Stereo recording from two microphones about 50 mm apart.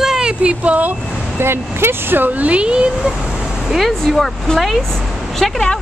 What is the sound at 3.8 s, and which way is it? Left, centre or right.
Speech, centre.